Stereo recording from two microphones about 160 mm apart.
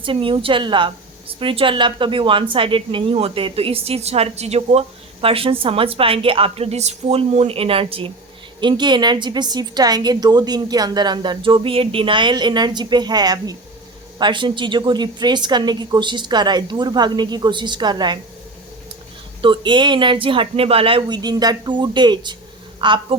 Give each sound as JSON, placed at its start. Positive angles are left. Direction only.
{"t": 0.0, "sound": "a woman's voice", "side_deg": -35}
{"t": 19.4, "sound": "a woman's voice", "side_deg": -30}